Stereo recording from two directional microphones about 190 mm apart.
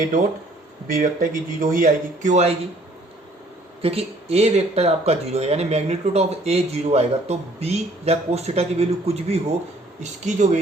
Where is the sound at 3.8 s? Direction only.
30° right (ahead or behind).